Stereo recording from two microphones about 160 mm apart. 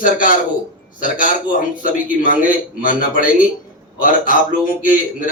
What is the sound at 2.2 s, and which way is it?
A man's voice, 60° left (ahead or behind).